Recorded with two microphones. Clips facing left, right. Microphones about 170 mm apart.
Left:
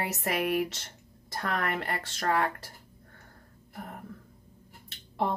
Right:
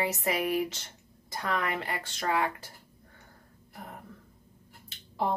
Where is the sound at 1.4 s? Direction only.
55° left (ahead or behind).